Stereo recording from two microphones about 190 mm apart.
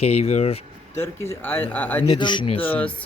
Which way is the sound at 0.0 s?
35° left (ahead or behind).